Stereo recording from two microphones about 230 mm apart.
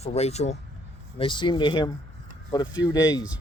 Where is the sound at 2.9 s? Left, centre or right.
Centre.